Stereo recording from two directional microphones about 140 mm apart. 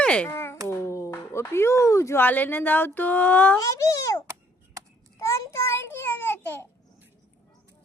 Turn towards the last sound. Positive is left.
turn(degrees=15)  # may be behind; listen again after turning